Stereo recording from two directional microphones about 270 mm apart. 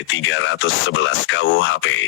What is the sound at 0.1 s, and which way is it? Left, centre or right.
Speech, left.